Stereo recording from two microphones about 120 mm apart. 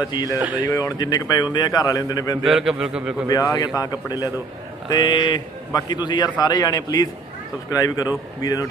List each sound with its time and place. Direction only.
0.1 s a man's voice: 35° left (ahead or behind)
0.4 s speech: 15° right (ahead or behind)
0.7 s a man's voice: 25° left (ahead or behind)
2.4 s a man's voice: centre (ahead or behind)
3.3 s a man's voice: 30° left (ahead or behind)